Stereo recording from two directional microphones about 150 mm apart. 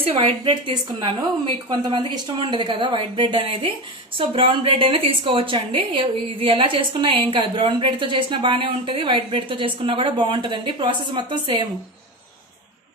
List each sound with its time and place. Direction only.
0.2 s a woman's voice: 35° right (ahead or behind)